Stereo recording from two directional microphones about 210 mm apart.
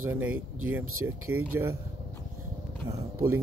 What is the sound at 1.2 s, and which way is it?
Speech, 90° right.